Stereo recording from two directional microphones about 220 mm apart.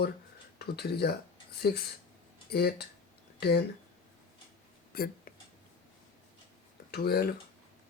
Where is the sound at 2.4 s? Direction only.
45° left (ahead or behind).